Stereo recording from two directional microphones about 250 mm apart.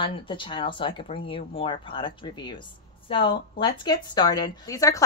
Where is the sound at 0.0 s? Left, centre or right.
Left.